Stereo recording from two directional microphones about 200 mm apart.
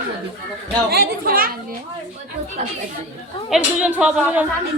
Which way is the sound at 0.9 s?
50° right (ahead or behind).